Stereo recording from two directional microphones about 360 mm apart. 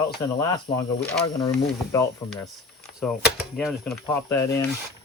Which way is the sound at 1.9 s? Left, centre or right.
Centre.